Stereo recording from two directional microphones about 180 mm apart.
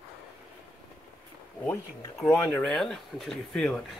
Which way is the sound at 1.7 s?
5° left (ahead or behind).